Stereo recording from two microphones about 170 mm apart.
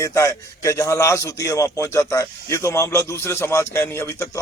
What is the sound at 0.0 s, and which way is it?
A man's voice, 15° left (ahead or behind).